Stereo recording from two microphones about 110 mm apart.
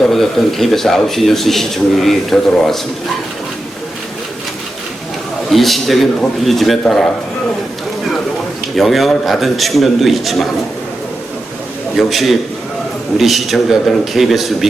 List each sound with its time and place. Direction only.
0.0 s a man's voice: centre (ahead or behind)
5.5 s a man's voice: centre (ahead or behind)
8.7 s a man's voice: centre (ahead or behind)
11.9 s a man's voice: centre (ahead or behind)